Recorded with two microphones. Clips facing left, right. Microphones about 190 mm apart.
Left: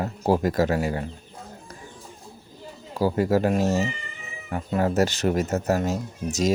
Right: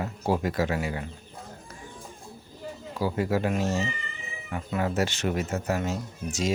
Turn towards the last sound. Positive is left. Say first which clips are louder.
# left 5 dB
turn(degrees=40)  # may be behind; listen again after turning